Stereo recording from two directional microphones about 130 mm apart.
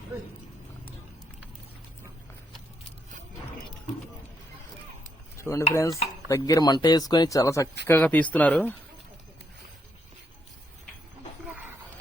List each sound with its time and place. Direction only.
5.4 s dishes: 25° left (ahead or behind)
5.7 s speech: 25° left (ahead or behind)